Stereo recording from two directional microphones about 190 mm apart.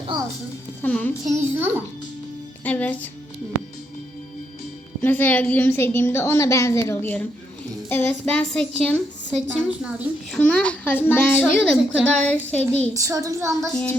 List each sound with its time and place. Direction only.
0.1 s speech: 25° right (ahead or behind)
0.8 s a child's voice: 10° left (ahead or behind)
1.3 s a woman's voice: 10° right (ahead or behind)
2.6 s a child's voice: 10° left (ahead or behind)
5.0 s a child's voice: 10° left (ahead or behind)
10.3 s a child's voice: 5° left (ahead or behind)
12.9 s a woman's voice: 15° right (ahead or behind)